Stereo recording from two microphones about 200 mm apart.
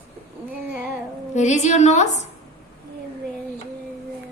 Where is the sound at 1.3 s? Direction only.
35° left (ahead or behind).